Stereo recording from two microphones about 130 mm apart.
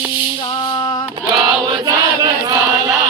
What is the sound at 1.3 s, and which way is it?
Chant, 35° right (ahead or behind).